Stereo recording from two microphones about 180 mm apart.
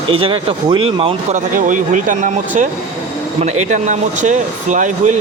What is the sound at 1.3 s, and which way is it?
Speech, 45° right (ahead or behind).